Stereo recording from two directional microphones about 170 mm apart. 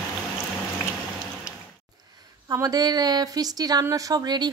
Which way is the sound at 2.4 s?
20° right (ahead or behind).